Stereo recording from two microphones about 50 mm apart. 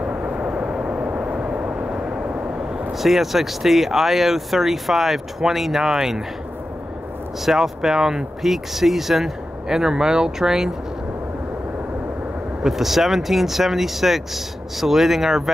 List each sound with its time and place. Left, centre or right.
0.0 s vehicle: right
3.0 s speech: centre
7.4 s speech: centre
12.6 s speech: centre